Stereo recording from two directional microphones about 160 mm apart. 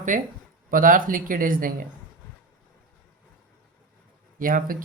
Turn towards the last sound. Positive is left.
turn(degrees=-60)  # may be behind; listen again after turning